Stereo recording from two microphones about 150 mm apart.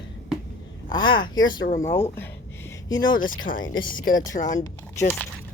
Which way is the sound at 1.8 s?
15° left (ahead or behind).